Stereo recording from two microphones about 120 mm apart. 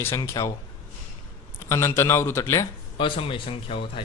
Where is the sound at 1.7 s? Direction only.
20° left (ahead or behind).